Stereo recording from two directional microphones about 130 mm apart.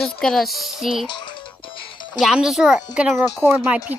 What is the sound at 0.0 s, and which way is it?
Speech, centre (ahead or behind).